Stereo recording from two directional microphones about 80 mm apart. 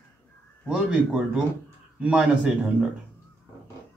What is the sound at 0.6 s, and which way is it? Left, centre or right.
Speech, centre.